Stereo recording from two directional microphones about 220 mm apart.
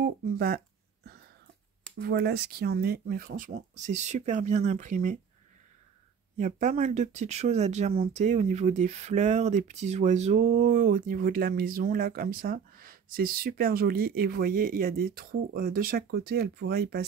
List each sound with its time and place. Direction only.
0.0 s speech: 45° right (ahead or behind)
2.0 s speech: 45° right (ahead or behind)
6.3 s speech: 35° right (ahead or behind)